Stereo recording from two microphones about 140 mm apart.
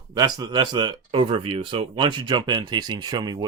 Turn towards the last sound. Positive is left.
turn(degrees=-30)  # may be behind; listen again after turning